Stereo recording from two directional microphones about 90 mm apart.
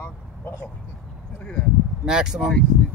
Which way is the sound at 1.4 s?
10° left (ahead or behind).